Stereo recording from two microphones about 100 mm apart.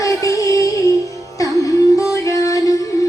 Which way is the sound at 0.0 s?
35° left (ahead or behind).